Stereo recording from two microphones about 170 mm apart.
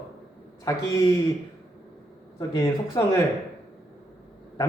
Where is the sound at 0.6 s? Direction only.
15° left (ahead or behind).